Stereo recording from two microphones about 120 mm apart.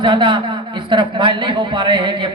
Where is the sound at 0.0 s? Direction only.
45° right (ahead or behind).